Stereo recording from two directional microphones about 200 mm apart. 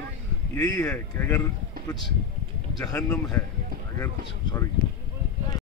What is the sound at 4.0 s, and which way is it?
Speech, 15° left (ahead or behind).